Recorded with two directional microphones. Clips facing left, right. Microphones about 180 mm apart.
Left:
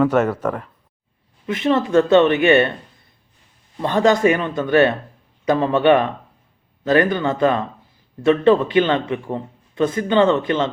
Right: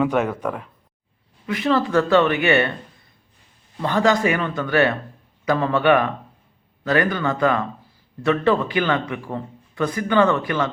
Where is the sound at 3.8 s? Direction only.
20° left (ahead or behind).